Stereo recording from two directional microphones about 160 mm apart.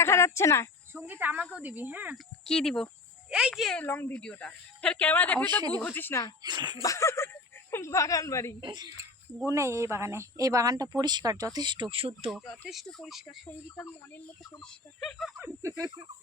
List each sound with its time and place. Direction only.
0.0 s speech: 15° left (ahead or behind)
0.9 s speech: 10° right (ahead or behind)
2.5 s speech: 5° left (ahead or behind)
6.4 s speech: 25° right (ahead or behind)
6.8 s a woman's voice: 20° left (ahead or behind)
8.6 s speech: 25° right (ahead or behind)
12.6 s speech: centre (ahead or behind)
14.6 s speech: centre (ahead or behind)
15.4 s speech: 15° right (ahead or behind)